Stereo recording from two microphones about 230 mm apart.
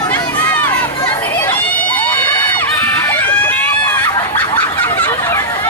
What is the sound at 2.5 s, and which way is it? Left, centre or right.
Crowd, centre.